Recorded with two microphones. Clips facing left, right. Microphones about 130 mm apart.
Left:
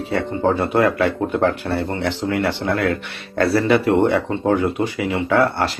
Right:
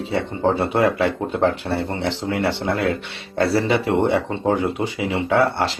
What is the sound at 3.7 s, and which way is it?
Speech, 50° left (ahead or behind).